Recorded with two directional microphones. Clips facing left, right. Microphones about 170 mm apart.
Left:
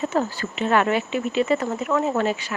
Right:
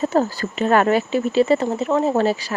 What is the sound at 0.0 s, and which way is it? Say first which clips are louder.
Speech: right 4 dB; 35° right (ahead or behind).